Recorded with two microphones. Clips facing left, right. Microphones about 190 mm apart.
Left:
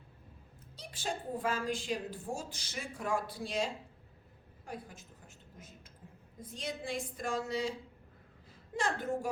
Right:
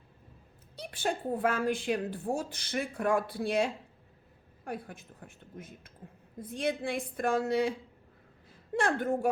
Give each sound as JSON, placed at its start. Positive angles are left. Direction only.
{"t": 0.8, "sound": "a woman's voice", "side_deg": -60}
{"t": 8.7, "sound": "a woman's voice", "side_deg": -60}